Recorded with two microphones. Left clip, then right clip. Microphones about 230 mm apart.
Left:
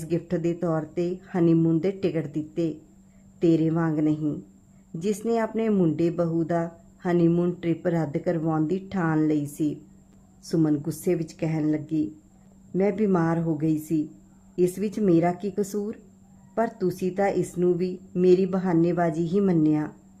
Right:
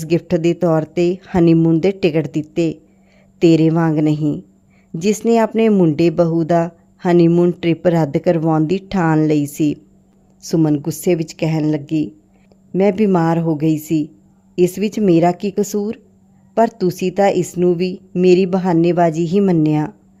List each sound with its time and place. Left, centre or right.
0.0 s speech: right